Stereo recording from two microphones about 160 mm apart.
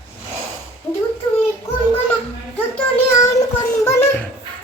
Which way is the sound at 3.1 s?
20° left (ahead or behind).